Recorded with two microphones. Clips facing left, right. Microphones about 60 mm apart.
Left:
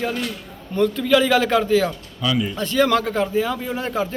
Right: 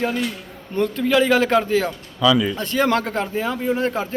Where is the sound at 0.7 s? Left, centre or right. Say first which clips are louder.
Left 1 dB; right.